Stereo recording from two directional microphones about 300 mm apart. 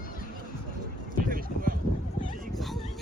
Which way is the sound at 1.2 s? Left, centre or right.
Right.